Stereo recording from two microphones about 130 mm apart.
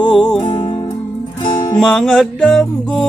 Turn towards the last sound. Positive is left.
turn(degrees=5)  # may be behind; listen again after turning